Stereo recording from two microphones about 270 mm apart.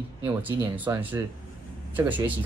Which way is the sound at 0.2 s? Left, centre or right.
Centre.